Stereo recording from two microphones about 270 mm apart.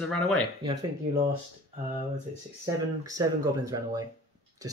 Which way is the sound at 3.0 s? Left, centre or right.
Centre.